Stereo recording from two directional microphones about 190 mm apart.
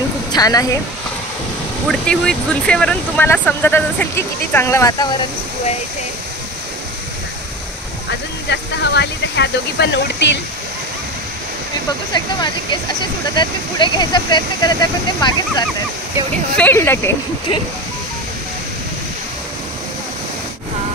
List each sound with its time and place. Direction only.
0.3 s a woman's voice: 20° left (ahead or behind)
1.9 s speech: 5° left (ahead or behind); by 5.1 s 20° left (ahead or behind)
8.5 s speech: 65° left (ahead or behind)
13.3 s speech: 25° left (ahead or behind)
16.5 s speech: 10° left (ahead or behind)